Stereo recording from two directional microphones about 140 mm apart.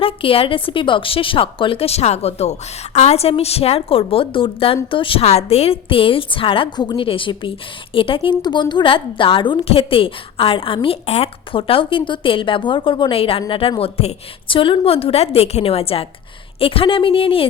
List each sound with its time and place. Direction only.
0.0 s a woman's voice: 40° left (ahead or behind)